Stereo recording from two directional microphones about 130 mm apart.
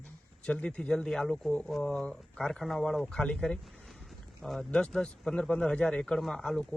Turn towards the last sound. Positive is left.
turn(degrees=5)  # may be behind; listen again after turning